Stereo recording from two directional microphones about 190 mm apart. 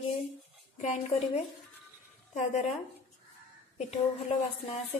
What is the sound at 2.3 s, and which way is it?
Speech, 40° left (ahead or behind).